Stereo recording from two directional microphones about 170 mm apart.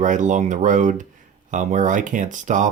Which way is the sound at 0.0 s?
45° right (ahead or behind).